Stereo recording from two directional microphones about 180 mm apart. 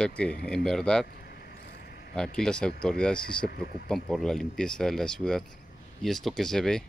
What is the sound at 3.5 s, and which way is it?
Speech, 55° left (ahead or behind).